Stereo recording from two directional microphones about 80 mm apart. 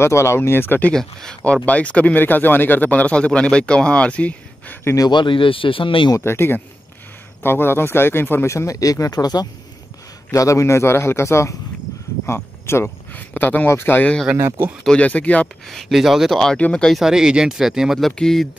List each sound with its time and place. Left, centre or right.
0.0 s speech: left
0.9 s speech: centre
5.1 s speech: left
6.1 s speech: left
10.3 s speech: left
12.6 s speech: left
14.3 s speech: right
15.0 s speech: centre
15.6 s speech: centre
16.5 s speech: centre
16.9 s speech: centre